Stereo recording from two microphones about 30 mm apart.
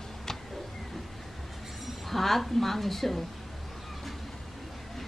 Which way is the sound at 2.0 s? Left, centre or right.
Centre.